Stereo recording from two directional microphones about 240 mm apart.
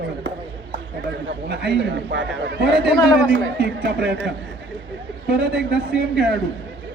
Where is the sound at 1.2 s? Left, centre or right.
Right.